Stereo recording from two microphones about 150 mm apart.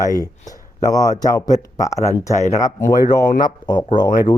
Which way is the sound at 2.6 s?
20° left (ahead or behind).